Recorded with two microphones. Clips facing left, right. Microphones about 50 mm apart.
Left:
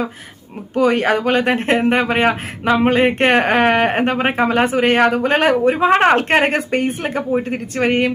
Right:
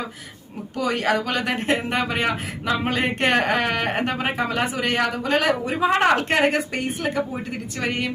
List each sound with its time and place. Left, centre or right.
0.8 s speech: left